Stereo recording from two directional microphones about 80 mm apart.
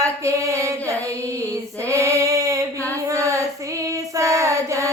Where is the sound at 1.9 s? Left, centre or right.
Right.